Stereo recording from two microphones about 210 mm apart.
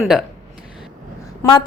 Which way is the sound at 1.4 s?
20° left (ahead or behind).